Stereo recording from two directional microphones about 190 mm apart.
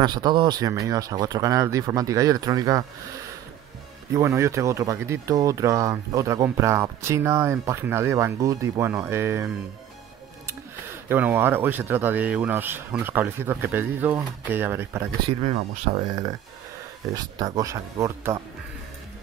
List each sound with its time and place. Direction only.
0.0 s speech: 20° right (ahead or behind)
4.1 s speech: 15° right (ahead or behind)
11.1 s speech: 10° right (ahead or behind)
15.2 s speech: 35° right (ahead or behind)
17.1 s speech: 20° right (ahead or behind)